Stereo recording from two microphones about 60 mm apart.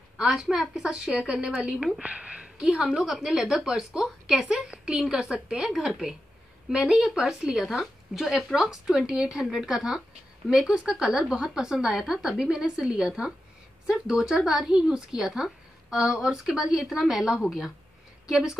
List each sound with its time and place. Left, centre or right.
0.3 s speech: centre
2.6 s a woman's voice: centre